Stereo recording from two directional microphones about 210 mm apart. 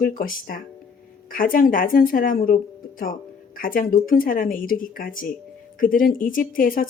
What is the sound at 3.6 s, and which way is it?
Speech, 40° left (ahead or behind).